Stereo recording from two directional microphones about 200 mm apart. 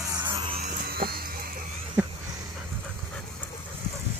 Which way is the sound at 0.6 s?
50° right (ahead or behind).